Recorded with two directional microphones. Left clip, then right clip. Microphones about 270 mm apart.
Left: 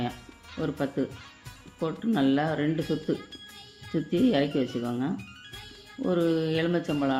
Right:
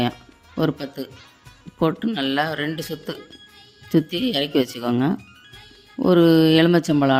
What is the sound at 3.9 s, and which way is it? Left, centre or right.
Speech, right.